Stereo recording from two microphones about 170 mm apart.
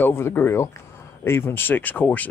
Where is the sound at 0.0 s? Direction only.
15° left (ahead or behind).